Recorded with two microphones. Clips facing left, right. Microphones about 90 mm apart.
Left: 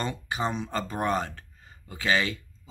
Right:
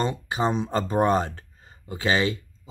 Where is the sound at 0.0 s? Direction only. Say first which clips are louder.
Right 5 dB; 25° right (ahead or behind).